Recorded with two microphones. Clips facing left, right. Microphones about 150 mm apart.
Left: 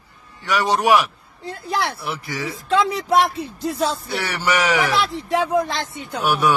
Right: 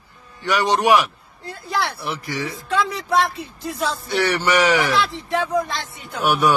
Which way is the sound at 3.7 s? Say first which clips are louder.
Left 3 dB; 25° left (ahead or behind).